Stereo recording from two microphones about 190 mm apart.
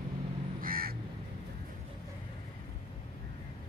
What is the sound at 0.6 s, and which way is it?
Crow, 50° right (ahead or behind).